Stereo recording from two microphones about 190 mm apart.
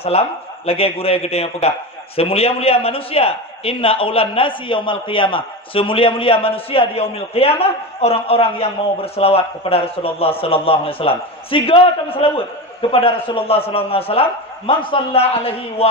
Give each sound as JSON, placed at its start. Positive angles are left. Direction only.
{"t": 0.0, "sound": "a man's voice", "side_deg": 30}